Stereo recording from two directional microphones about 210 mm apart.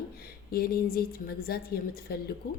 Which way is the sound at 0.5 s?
45° left (ahead or behind).